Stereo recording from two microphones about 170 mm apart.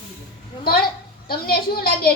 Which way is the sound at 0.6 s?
65° left (ahead or behind).